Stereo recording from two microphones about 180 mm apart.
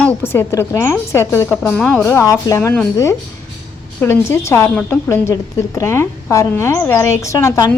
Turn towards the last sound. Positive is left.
turn(degrees=15)  # may be behind; listen again after turning